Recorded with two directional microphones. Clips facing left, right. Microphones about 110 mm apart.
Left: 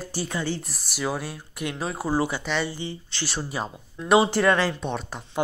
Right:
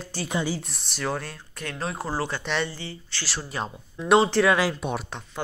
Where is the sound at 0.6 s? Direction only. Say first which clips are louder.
Left 2 dB; centre (ahead or behind).